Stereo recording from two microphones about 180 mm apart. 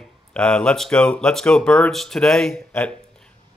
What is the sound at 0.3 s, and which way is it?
Speech, 5° left (ahead or behind).